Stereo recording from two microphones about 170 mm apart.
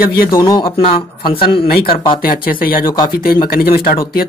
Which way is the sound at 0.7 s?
35° left (ahead or behind).